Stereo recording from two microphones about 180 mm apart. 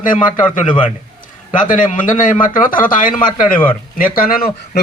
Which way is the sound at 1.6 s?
45° left (ahead or behind).